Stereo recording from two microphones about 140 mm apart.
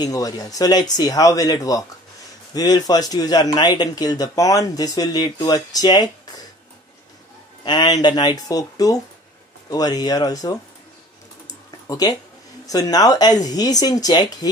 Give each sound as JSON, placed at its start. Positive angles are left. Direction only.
{"t": 0.0, "sound": "speech", "side_deg": 25}
{"t": 7.6, "sound": "speech", "side_deg": 30}
{"t": 11.9, "sound": "speech", "side_deg": 25}